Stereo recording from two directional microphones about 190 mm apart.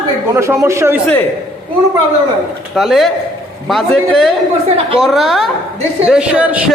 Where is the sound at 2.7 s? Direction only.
Centre (ahead or behind).